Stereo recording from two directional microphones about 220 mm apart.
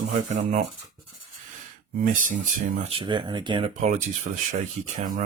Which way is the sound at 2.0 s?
35° right (ahead or behind).